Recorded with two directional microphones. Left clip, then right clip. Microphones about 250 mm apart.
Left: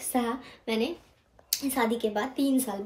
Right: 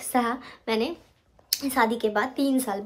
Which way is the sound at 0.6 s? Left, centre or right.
Centre.